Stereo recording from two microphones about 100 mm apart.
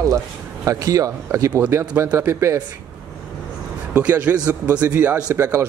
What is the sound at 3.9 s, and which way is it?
A man's voice, 15° right (ahead or behind).